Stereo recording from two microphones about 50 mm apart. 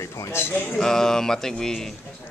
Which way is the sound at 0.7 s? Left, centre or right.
Centre.